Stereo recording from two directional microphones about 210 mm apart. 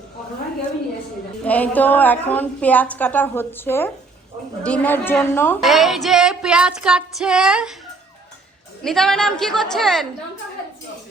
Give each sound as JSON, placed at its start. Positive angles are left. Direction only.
{"t": 1.5, "sound": "a woman's voice", "side_deg": 5}
{"t": 5.6, "sound": "female singing", "side_deg": 0}
{"t": 8.8, "sound": "female singing", "side_deg": 0}